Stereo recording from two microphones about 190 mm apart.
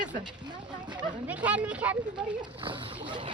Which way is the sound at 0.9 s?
25° right (ahead or behind).